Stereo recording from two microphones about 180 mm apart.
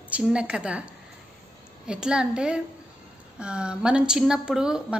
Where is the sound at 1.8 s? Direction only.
5° right (ahead or behind).